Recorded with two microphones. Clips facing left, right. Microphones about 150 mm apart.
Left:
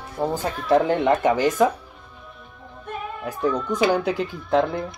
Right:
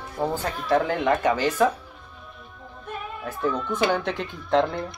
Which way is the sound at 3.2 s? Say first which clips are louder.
Left 3 dB; 15° left (ahead or behind).